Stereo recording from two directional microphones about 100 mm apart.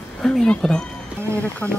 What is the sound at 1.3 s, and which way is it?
Speech, 20° left (ahead or behind).